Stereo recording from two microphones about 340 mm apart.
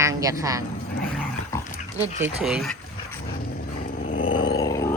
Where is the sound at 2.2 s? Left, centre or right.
Centre.